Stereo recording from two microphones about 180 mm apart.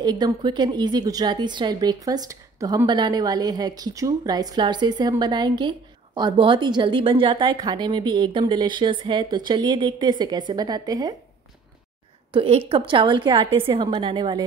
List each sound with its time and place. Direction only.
0.0 s a woman's voice: 25° right (ahead or behind)
12.3 s a woman's voice: 30° right (ahead or behind)